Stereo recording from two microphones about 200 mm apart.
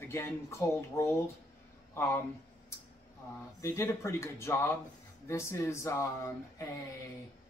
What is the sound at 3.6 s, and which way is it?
Speech, 15° left (ahead or behind).